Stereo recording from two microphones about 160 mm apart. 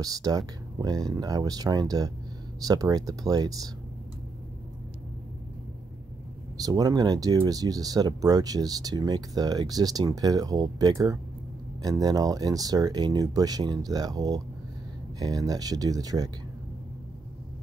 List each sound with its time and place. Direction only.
0.0 s speech: 25° right (ahead or behind)
6.5 s speech: 25° right (ahead or behind)